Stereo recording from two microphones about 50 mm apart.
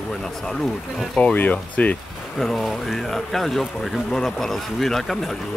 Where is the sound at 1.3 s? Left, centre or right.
Left.